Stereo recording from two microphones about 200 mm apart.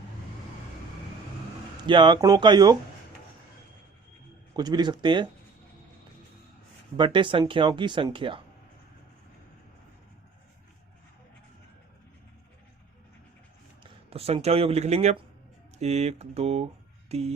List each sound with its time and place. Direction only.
1.9 s speech: 25° right (ahead or behind)
4.5 s speech: 20° right (ahead or behind)
6.9 s speech: 25° right (ahead or behind)
14.1 s speech: 30° right (ahead or behind)